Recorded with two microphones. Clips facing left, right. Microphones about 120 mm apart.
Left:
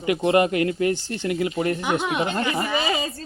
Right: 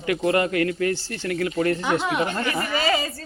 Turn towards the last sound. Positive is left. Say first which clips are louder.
# right 1 dB
turn(degrees=20)  # may be behind; listen again after turning